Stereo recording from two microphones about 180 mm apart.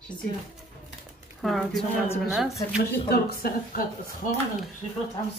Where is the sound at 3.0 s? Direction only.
60° left (ahead or behind).